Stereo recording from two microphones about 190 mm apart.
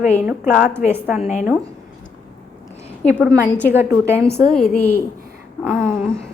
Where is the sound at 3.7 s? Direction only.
10° right (ahead or behind).